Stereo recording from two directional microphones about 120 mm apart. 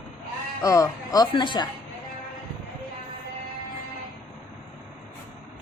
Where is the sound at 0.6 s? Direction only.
30° left (ahead or behind).